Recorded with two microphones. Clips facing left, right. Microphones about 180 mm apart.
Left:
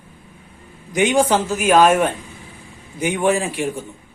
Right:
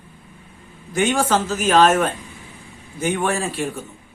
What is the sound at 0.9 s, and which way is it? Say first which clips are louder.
Speech: left 3 dB; 15° left (ahead or behind).